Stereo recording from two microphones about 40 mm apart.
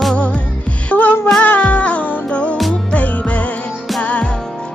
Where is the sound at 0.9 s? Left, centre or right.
Left.